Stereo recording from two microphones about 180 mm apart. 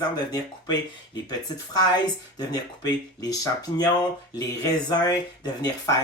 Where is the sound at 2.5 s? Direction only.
20° left (ahead or behind).